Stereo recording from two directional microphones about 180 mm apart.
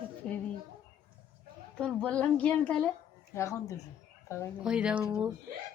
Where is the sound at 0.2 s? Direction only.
5° left (ahead or behind).